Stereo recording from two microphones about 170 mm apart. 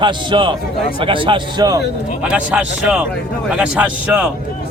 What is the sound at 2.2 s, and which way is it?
A man's voice, 5° right (ahead or behind).